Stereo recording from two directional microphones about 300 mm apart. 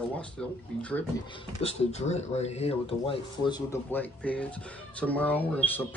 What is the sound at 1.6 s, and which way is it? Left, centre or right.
Speech, left.